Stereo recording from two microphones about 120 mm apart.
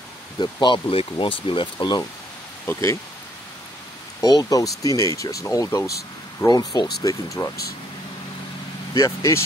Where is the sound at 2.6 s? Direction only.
20° left (ahead or behind).